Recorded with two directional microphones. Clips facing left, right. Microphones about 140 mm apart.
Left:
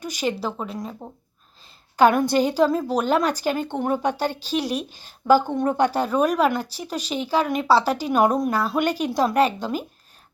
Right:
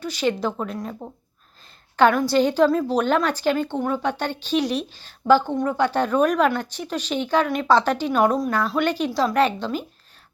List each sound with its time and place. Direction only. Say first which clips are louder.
0.0 s speech: right 2 dB; 15° left (ahead or behind)
0.4 s speech: right 2 dB; centre (ahead or behind)
2.0 s speech: even; 15° left (ahead or behind)